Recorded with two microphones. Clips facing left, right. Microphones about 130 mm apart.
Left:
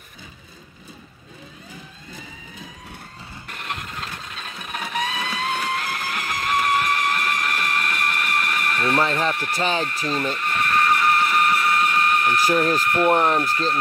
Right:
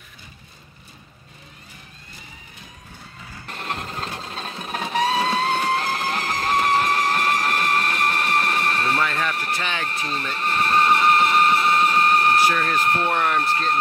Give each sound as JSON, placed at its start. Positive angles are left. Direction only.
{"t": 3.4, "sound": "steam whistle", "side_deg": -30}
{"t": 8.9, "sound": "speech", "side_deg": 30}
{"t": 9.8, "sound": "speech", "side_deg": -35}
{"t": 10.3, "sound": "a sound", "side_deg": -30}
{"t": 12.7, "sound": "speech", "side_deg": -30}
{"t": 13.1, "sound": "speech", "side_deg": 35}
{"t": 13.4, "sound": "speech", "side_deg": -30}